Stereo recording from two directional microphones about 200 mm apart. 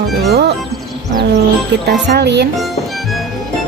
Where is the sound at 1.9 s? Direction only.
55° right (ahead or behind).